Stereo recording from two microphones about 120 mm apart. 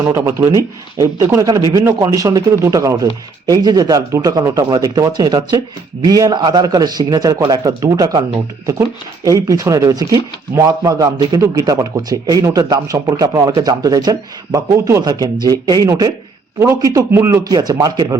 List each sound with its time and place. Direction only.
0.0 s speech: 25° right (ahead or behind)
17.4 s speech: 35° right (ahead or behind)